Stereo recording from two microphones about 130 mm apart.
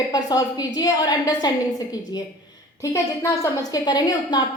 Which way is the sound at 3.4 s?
30° left (ahead or behind).